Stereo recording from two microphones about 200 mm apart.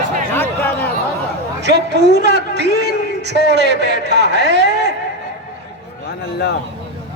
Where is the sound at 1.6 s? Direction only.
55° right (ahead or behind).